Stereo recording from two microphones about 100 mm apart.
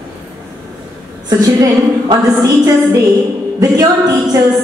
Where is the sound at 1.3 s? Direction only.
40° right (ahead or behind).